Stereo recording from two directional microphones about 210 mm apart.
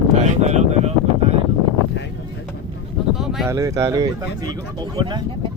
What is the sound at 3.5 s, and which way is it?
Speech, 15° right (ahead or behind).